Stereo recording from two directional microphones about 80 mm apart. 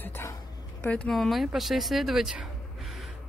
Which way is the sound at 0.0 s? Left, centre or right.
Left.